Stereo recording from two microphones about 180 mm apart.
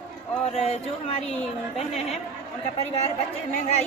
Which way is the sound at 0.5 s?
35° left (ahead or behind).